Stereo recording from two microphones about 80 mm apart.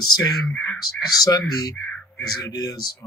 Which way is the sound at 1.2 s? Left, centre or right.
Left.